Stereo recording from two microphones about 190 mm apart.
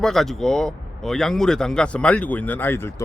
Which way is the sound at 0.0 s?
Centre (ahead or behind).